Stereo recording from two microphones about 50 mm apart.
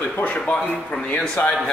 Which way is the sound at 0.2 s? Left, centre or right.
Left.